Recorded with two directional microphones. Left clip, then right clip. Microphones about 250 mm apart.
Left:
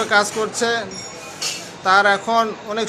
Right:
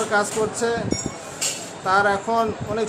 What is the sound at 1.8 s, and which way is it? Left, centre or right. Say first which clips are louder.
A man's voice: left 4 dB; centre.